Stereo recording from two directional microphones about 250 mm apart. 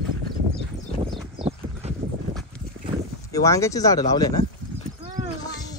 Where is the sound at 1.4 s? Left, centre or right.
Right.